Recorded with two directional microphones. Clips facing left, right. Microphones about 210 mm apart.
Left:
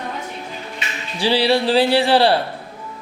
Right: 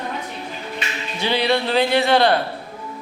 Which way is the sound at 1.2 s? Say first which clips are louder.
Left 3 dB; 30° left (ahead or behind).